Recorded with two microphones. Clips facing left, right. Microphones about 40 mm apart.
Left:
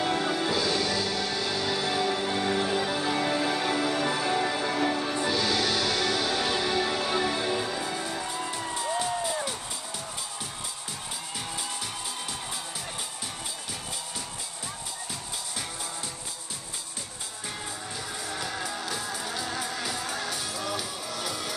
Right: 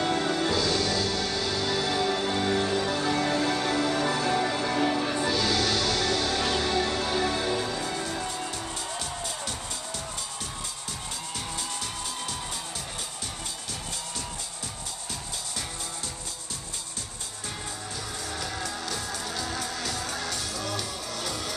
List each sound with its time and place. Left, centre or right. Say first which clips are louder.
0.0 s music: right 1 dB; centre
8.5 s music: left 3 dB; centre
18.3 s music: left 1 dB; centre